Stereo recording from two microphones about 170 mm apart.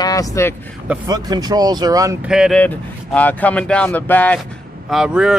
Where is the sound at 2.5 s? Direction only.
10° left (ahead or behind).